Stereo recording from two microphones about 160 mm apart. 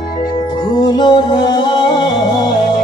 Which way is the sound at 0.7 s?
25° left (ahead or behind).